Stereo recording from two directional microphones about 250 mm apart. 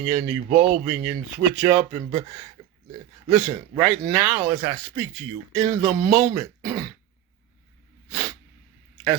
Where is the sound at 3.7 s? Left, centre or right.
Centre.